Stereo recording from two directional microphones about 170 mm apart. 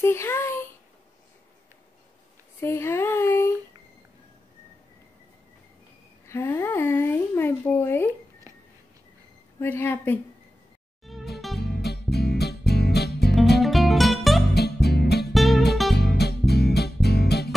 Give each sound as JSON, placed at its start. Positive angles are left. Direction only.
{"t": 0.0, "sound": "a sound", "side_deg": 15}
{"t": 2.6, "sound": "speech", "side_deg": 15}
{"t": 6.2, "sound": "speech", "side_deg": 15}
{"t": 8.1, "sound": "a sound", "side_deg": -20}
{"t": 9.6, "sound": "speech", "side_deg": 15}
{"t": 11.1, "sound": "music", "side_deg": 0}
{"t": 11.6, "sound": "music", "side_deg": 75}
{"t": 13.6, "sound": "music", "side_deg": 0}
{"t": 14.5, "sound": "music", "side_deg": 75}
{"t": 15.3, "sound": "music", "side_deg": 0}
{"t": 16.0, "sound": "music", "side_deg": 75}